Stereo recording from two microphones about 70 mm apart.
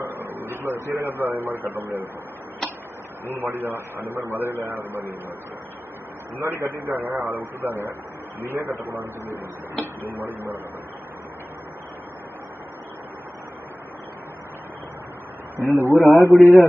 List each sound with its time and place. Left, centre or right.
0.0 s a sound: right
1.0 s a man's voice: right
3.3 s a man's voice: right
6.4 s a man's voice: right
6.7 s a man's voice: right
15.7 s a man's voice: right
16.0 s a man's voice: left
16.3 s a man's voice: right